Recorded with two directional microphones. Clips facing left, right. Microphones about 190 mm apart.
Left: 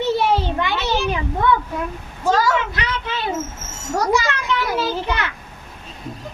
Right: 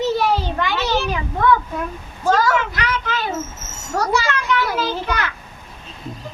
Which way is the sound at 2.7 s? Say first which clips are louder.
Right 2 dB; 25° left (ahead or behind).